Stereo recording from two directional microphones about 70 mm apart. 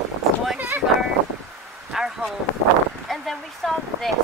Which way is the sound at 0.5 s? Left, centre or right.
Right.